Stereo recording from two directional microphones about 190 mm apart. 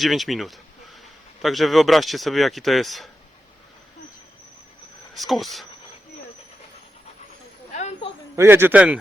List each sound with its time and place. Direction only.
0.0 s speech: centre (ahead or behind)
5.1 s speech: centre (ahead or behind)
7.7 s snake: 35° left (ahead or behind)
8.4 s a man's voice: 10° right (ahead or behind)